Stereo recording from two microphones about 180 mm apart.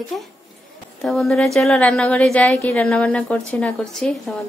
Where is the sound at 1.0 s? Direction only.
Centre (ahead or behind).